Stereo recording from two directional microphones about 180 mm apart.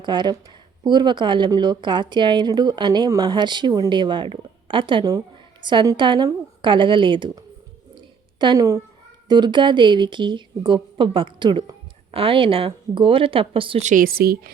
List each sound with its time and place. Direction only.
0.0 s a woman's voice: 25° right (ahead or behind)
13.8 s a woman's voice: 50° right (ahead or behind)